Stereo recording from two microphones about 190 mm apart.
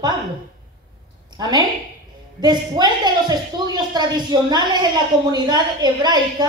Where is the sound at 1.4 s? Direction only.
20° right (ahead or behind).